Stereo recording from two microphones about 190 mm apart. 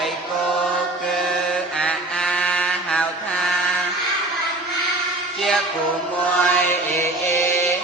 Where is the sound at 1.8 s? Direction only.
5° left (ahead or behind).